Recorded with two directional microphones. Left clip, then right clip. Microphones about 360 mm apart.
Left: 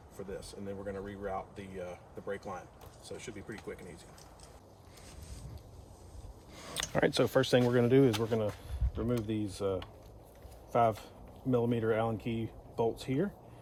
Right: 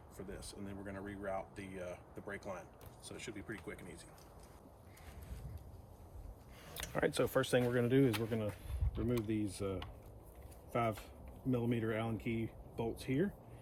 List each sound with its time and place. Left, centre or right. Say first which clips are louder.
0.9 s speech: left 3 dB; centre
6.7 s speech: left 6 dB; left